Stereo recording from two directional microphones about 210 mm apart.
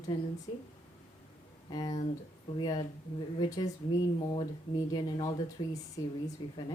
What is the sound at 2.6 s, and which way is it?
Speech, 20° left (ahead or behind).